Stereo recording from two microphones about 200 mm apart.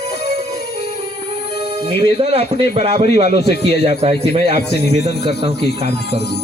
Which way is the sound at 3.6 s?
30° right (ahead or behind).